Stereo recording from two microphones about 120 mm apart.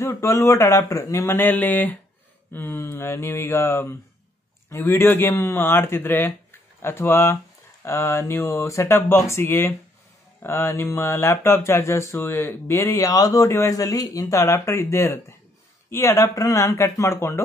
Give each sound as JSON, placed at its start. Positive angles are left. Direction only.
{"t": 0.0, "sound": "speech", "side_deg": 25}